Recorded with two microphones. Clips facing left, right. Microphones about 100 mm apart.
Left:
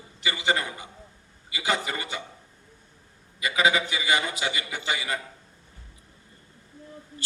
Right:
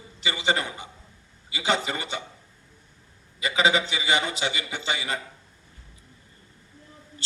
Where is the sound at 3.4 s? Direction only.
25° right (ahead or behind).